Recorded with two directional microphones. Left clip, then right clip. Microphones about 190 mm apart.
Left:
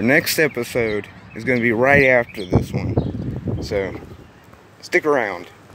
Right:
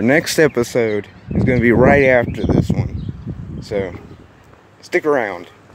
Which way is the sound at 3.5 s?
15° right (ahead or behind).